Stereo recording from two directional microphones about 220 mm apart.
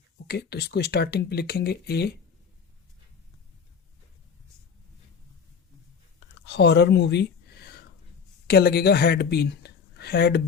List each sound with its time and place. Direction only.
0.3 s speech: 45° left (ahead or behind)
6.5 s speech: 50° left (ahead or behind)